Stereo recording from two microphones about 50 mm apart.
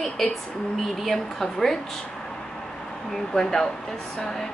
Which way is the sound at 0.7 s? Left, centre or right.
Centre.